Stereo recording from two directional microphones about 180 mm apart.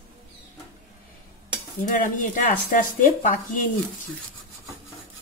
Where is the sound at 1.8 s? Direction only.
45° left (ahead or behind).